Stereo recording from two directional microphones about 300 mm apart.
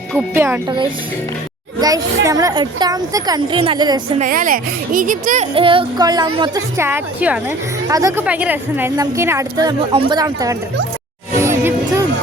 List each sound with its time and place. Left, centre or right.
0.1 s a woman's voice: centre
11.3 s music: centre